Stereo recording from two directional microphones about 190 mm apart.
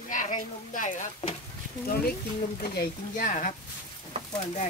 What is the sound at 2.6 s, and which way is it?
Speech, 50° left (ahead or behind).